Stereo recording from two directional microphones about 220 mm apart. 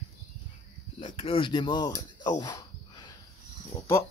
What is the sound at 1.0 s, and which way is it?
Speech, 25° left (ahead or behind).